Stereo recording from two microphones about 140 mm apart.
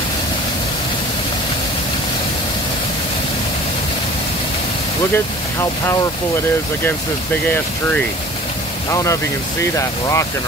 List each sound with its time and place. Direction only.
5.1 s speech: 15° left (ahead or behind)
7.4 s speech: 10° left (ahead or behind)
8.9 s speech: 20° left (ahead or behind)